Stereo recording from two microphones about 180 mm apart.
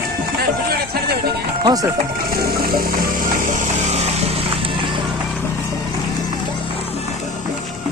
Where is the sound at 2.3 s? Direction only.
55° right (ahead or behind); by 5.0 s 30° right (ahead or behind).